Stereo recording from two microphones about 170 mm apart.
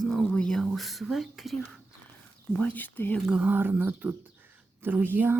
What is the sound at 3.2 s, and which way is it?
Speech, 5° right (ahead or behind).